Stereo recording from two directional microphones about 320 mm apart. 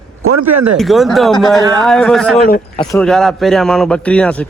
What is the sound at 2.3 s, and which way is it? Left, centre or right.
Speech, left.